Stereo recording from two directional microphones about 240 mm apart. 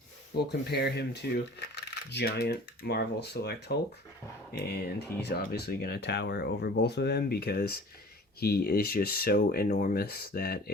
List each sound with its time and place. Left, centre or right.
0.3 s speech: left
5.2 s speech: left